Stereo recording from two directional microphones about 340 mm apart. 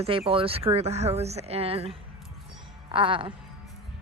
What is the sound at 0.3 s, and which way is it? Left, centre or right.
Speech, centre.